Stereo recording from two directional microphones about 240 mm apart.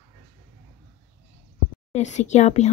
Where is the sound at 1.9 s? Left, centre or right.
Left.